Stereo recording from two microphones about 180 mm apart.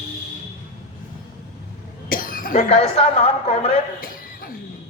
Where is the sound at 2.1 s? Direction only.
50° left (ahead or behind).